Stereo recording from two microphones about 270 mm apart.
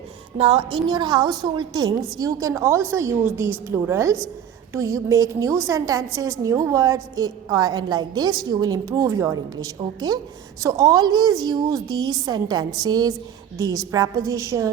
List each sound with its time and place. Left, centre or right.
0.3 s a woman's voice: centre